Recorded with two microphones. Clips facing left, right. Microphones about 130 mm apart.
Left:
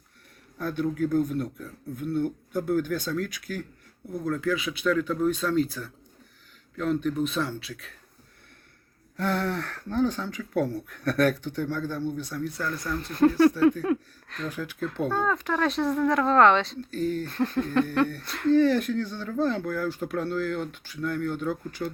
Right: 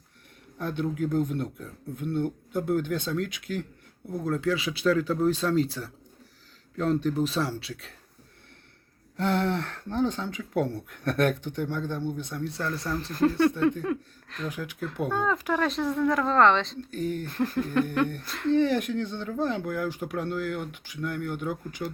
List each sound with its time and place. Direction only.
0.6 s speech: 20° right (ahead or behind)
9.1 s speech: 20° right (ahead or behind)
13.1 s speech: centre (ahead or behind)
14.4 s speech: 15° right (ahead or behind); by 16.7 s centre (ahead or behind)
16.9 s speech: 15° right (ahead or behind)
17.2 s speech: 5° right (ahead or behind)
17.9 s speech: 15° right (ahead or behind)